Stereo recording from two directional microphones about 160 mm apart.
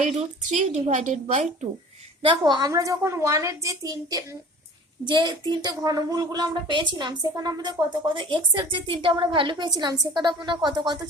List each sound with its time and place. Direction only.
0.0 s a woman's voice: 45° right (ahead or behind)
2.2 s a woman's voice: 30° right (ahead or behind)